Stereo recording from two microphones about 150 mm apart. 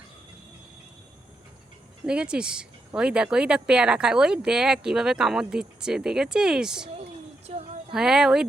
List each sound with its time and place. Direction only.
2.0 s speech: 5° right (ahead or behind)
7.4 s a sound: 45° right (ahead or behind)
7.9 s speech: 5° right (ahead or behind)